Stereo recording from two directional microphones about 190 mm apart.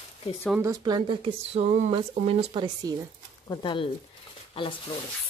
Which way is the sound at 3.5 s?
25° left (ahead or behind).